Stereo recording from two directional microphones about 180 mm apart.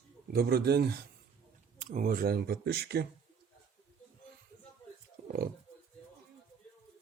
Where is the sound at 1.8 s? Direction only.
45° right (ahead or behind); by 3.0 s 65° right (ahead or behind).